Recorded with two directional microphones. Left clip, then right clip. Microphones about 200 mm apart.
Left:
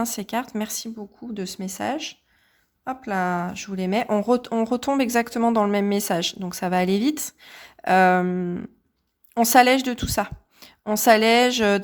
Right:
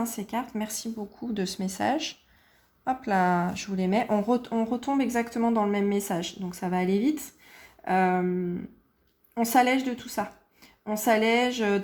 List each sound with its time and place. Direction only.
0.0 s speech: 30° left (ahead or behind)
1.1 s a woman's voice: 5° left (ahead or behind); by 11.8 s 40° left (ahead or behind)